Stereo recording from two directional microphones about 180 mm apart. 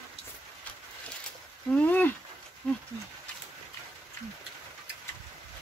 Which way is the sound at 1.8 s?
10° left (ahead or behind).